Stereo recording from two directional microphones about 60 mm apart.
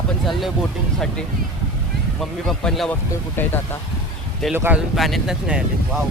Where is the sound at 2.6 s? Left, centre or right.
Centre.